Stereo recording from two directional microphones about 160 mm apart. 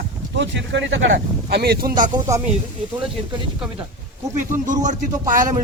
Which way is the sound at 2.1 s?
20° right (ahead or behind).